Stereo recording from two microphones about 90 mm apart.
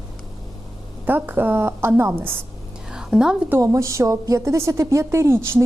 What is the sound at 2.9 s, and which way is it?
Music, 10° right (ahead or behind).